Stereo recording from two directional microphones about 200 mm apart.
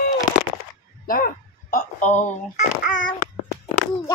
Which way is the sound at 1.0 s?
45° left (ahead or behind).